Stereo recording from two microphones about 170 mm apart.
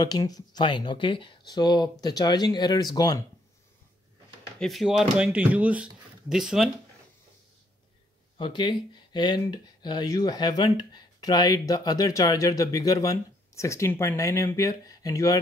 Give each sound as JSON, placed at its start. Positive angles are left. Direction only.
{"t": 0.0, "sound": "speech", "side_deg": 20}
{"t": 4.6, "sound": "speech", "side_deg": 0}
{"t": 8.4, "sound": "speech", "side_deg": 30}